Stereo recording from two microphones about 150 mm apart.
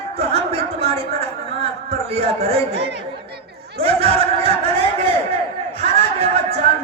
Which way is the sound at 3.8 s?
40° right (ahead or behind).